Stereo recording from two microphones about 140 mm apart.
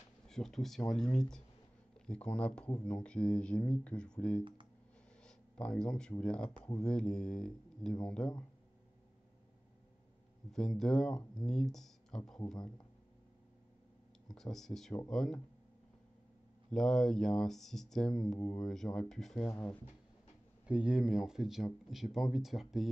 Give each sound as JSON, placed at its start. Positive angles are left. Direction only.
{"t": 0.3, "sound": "speech", "side_deg": 5}
{"t": 10.5, "sound": "speech", "side_deg": 5}
{"t": 12.5, "sound": "speech", "side_deg": 30}
{"t": 14.2, "sound": "speech", "side_deg": 5}
{"t": 16.7, "sound": "speech", "side_deg": 5}
{"t": 20.6, "sound": "speech", "side_deg": -5}